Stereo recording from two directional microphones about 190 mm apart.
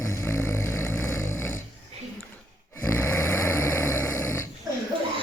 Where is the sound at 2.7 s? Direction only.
15° left (ahead or behind).